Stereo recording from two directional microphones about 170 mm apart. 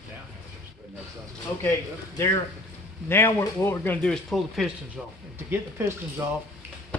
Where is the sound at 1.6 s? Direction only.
15° left (ahead or behind); by 5.0 s centre (ahead or behind).